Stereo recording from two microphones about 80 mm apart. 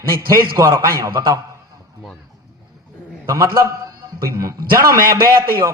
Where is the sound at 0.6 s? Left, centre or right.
Right.